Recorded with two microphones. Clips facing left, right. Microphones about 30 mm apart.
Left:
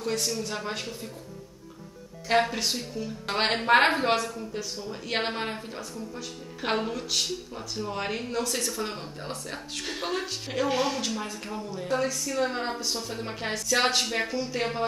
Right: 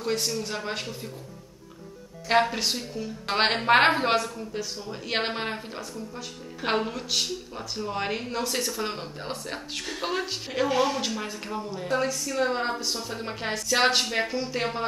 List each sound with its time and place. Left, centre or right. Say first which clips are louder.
0.0 s a woman's voice: right 1 dB; centre
2.4 s a woman's voice: right 2 dB; centre
10.7 s speech: right 3 dB; centre
11.0 s a woman's voice: right 1 dB; centre